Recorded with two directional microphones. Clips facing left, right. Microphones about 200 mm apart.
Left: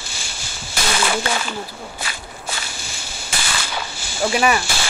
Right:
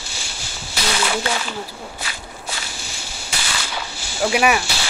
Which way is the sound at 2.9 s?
50° left (ahead or behind).